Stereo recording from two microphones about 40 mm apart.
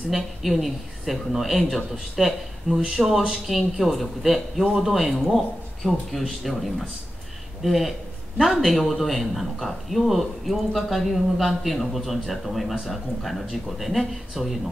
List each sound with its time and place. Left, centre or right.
0.1 s speech: centre
2.9 s speech: centre
7.6 s speech: centre